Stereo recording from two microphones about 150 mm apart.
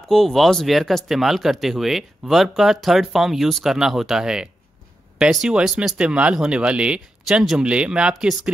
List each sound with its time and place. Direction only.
0.1 s speech: centre (ahead or behind)